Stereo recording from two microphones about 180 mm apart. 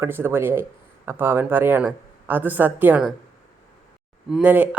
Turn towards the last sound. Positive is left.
turn(degrees=-10)  # may be behind; listen again after turning